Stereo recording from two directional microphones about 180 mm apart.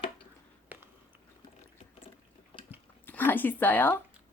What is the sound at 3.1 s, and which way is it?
Speech, 10° left (ahead or behind).